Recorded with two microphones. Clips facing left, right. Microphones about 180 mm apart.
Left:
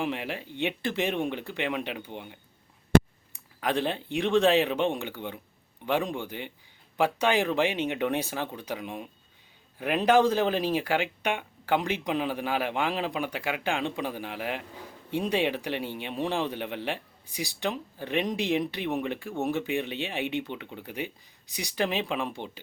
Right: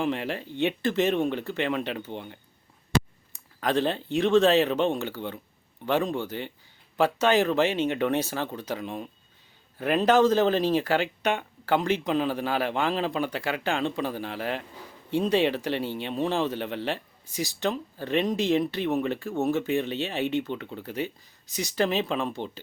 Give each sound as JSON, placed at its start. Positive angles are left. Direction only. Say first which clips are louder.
{"t": 0.0, "sound": "speech", "louder": "right 3 dB", "side_deg": 10}
{"t": 2.9, "sound": "a sound", "louder": "left 6 dB", "side_deg": 55}
{"t": 3.6, "sound": "speech", "louder": "right 3 dB", "side_deg": 10}